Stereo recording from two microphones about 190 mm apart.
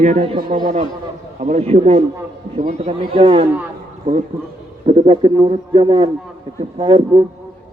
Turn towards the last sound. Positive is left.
turn(degrees=-25)  # may be behind; listen again after turning